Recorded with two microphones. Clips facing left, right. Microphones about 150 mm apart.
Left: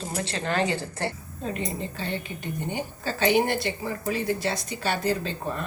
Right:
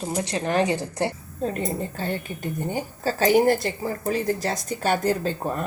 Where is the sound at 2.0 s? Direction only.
45° right (ahead or behind).